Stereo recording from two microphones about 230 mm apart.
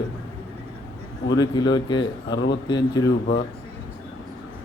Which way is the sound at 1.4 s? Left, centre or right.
Centre.